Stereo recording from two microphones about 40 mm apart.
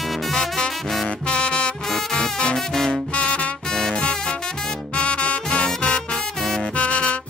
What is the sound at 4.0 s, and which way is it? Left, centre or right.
Music, left.